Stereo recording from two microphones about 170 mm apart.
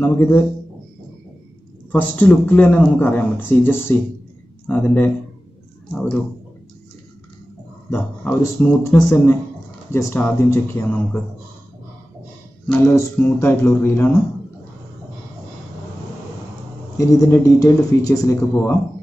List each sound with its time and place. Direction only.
0.0 s speech: 15° left (ahead or behind)
1.9 s speech: 10° left (ahead or behind)
7.9 s speech: 10° left (ahead or behind)
12.6 s speech: 10° left (ahead or behind)
16.9 s speech: 20° left (ahead or behind)